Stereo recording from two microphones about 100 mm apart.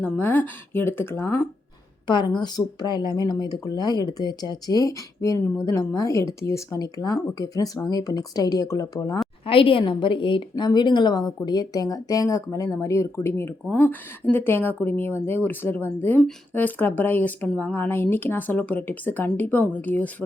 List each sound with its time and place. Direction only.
0.0 s speech: 20° left (ahead or behind)
2.0 s a woman's voice: 50° left (ahead or behind)
9.5 s a woman's voice: 60° left (ahead or behind); by 20.1 s 15° left (ahead or behind)